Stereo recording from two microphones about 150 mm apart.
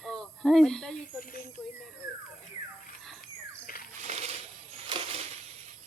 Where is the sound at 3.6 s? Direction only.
70° left (ahead or behind).